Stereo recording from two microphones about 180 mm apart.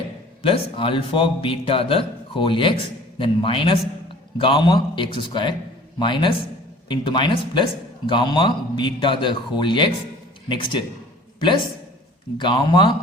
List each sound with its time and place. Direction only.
0.4 s speech: 30° left (ahead or behind)
12.4 s speech: 25° left (ahead or behind)